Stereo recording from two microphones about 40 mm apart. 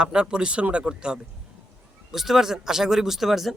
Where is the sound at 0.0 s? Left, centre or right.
Right.